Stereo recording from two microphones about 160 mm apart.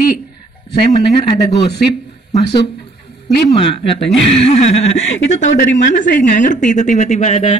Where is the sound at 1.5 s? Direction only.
30° left (ahead or behind).